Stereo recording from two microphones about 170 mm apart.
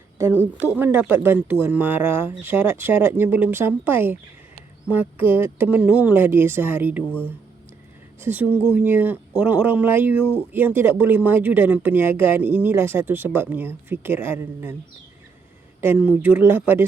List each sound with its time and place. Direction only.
0.2 s speech: 15° right (ahead or behind)
8.2 s speech: 10° right (ahead or behind)
15.8 s speech: 10° right (ahead or behind)